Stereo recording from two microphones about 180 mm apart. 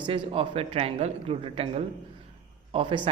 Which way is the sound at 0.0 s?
30° right (ahead or behind).